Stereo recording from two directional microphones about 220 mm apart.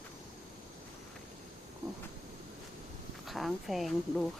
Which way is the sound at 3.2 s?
Centre (ahead or behind).